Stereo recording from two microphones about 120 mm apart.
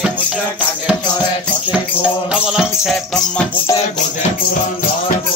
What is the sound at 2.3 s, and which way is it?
Music, 5° right (ahead or behind).